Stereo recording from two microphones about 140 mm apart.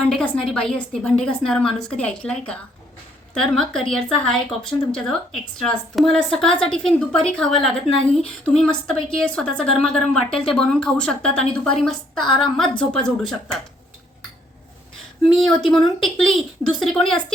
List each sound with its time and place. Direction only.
0.1 s a woman's voice: 5° left (ahead or behind)
15.4 s a woman's voice: centre (ahead or behind)